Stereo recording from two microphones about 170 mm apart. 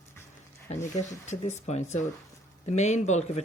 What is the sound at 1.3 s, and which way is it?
Speech, 40° left (ahead or behind).